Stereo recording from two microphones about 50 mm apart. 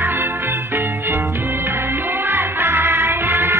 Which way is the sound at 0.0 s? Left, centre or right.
Right.